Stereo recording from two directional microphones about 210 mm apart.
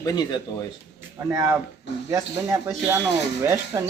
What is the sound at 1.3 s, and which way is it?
Speech, 15° right (ahead or behind).